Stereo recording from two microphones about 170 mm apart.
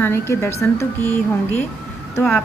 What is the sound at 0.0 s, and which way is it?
A woman's voice, 15° left (ahead or behind).